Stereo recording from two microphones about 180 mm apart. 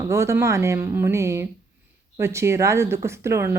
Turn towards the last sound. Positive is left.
turn(degrees=-15)  # may be behind; listen again after turning